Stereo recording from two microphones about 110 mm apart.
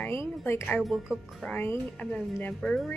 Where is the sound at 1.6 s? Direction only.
20° left (ahead or behind).